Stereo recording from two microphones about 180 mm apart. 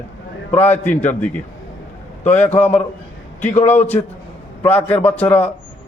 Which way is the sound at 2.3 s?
10° left (ahead or behind).